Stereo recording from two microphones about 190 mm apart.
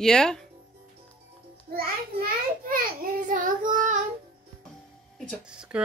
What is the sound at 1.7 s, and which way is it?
A child's voice, 50° right (ahead or behind).